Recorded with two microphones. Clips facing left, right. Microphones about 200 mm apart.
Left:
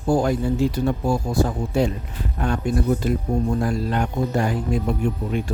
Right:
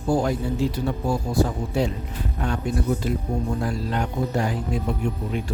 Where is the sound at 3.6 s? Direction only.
50° left (ahead or behind).